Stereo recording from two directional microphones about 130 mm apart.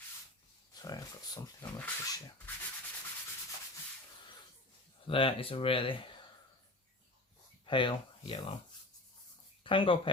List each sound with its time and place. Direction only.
0.7 s a sound: 30° left (ahead or behind)
5.0 s speech: 45° left (ahead or behind)
7.6 s speech: 40° left (ahead or behind)
9.6 s speech: 40° left (ahead or behind)